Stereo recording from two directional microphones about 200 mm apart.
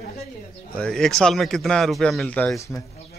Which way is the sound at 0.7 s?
5° left (ahead or behind).